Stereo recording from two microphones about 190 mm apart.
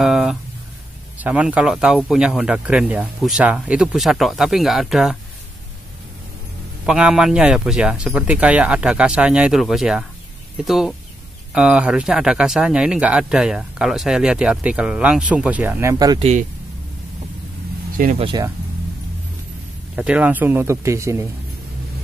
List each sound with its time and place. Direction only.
0.0 s a sound: centre (ahead or behind)
1.1 s speech: 5° right (ahead or behind)
6.9 s speech: 5° right (ahead or behind); by 16.3 s 20° right (ahead or behind)
18.1 s speech: 30° right (ahead or behind)
20.0 s speech: 5° right (ahead or behind)